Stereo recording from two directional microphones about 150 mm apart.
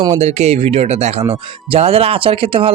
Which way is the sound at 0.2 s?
45° right (ahead or behind).